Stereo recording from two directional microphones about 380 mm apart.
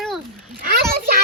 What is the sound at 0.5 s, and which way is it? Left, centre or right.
Speech, right.